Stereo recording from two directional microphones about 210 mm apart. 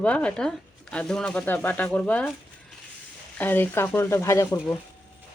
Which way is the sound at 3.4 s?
10° left (ahead or behind).